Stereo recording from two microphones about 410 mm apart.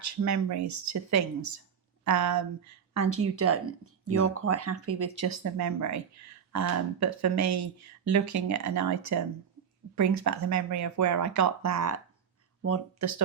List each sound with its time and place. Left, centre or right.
0.0 s speech: right